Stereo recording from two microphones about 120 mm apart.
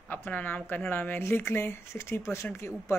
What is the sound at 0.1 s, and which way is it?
A woman's voice, 15° left (ahead or behind).